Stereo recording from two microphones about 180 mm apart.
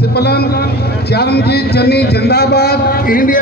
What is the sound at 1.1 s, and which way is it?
A man's voice, 65° left (ahead or behind).